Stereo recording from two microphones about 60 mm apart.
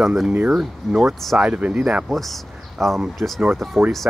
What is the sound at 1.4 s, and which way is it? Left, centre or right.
Speech, centre.